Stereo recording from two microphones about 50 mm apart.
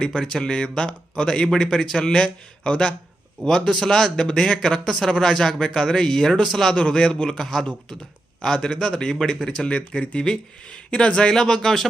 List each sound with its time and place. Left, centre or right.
0.0 s speech: centre
6.7 s speech: centre
9.5 s speech: left